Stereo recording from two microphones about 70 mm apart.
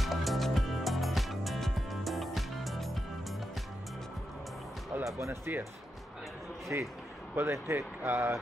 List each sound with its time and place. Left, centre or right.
0.0 s music: centre
5.0 s speech: right
6.7 s speech: right